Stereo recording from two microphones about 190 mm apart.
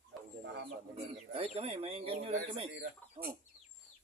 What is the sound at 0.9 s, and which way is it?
Speech, 30° right (ahead or behind).